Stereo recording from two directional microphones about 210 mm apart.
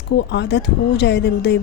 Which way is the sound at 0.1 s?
55° left (ahead or behind).